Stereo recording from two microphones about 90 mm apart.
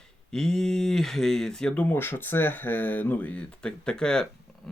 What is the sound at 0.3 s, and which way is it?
Speech, 5° left (ahead or behind).